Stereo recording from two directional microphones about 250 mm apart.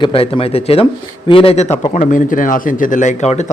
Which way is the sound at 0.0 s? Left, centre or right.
Left.